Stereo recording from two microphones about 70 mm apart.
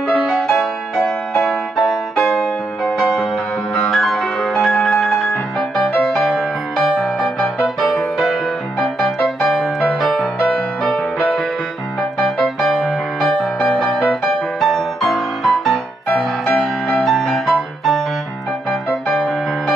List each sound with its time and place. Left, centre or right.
0.1 s music: centre
7.6 s music: centre
12.4 s music: centre
16.1 s music: left
17.0 s music: centre
19.0 s music: centre